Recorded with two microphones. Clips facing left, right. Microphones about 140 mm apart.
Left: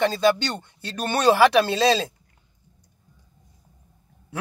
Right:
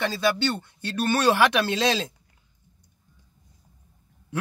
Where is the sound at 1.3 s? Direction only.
15° left (ahead or behind).